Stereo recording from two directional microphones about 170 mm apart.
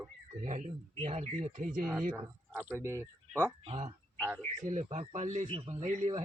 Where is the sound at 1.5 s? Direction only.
50° right (ahead or behind).